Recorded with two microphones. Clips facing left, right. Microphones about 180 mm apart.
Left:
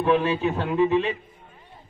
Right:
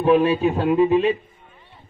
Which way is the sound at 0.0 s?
20° right (ahead or behind).